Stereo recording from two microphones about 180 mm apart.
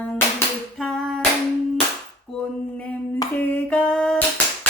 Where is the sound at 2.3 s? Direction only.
5° left (ahead or behind).